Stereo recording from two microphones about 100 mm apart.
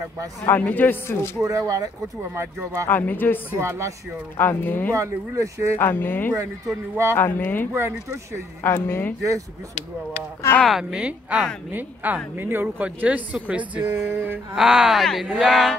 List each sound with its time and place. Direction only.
0.5 s a man's voice: 15° left (ahead or behind)
1.4 s speech: 35° right (ahead or behind)
2.9 s speech: 20° left (ahead or behind)
3.5 s speech: 30° right (ahead or behind)
4.4 s speech: 20° left (ahead or behind)
4.9 s speech: 30° right (ahead or behind)
5.8 s speech: 20° left (ahead or behind)
7.7 s speech: 30° right (ahead or behind)
8.6 s speech: 25° left (ahead or behind)
10.6 s speech: 5° right (ahead or behind); by 14.4 s 20° right (ahead or behind)
14.5 s speech: 5° right (ahead or behind)